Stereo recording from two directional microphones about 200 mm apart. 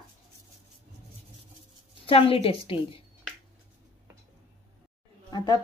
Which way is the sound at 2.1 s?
30° left (ahead or behind).